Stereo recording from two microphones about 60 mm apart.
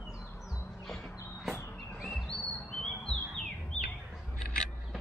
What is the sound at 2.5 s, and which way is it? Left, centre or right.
Squawk, centre.